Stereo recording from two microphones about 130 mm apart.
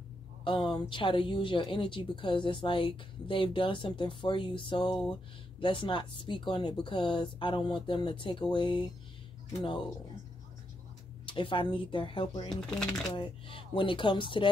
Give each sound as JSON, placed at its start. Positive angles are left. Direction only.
{"t": 0.4, "sound": "speech", "side_deg": 40}
{"t": 11.2, "sound": "speech", "side_deg": 40}
{"t": 12.6, "sound": "speech", "side_deg": 5}
{"t": 13.1, "sound": "speech", "side_deg": 40}